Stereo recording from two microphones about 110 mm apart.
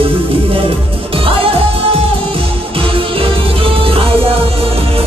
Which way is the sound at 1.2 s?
55° right (ahead or behind).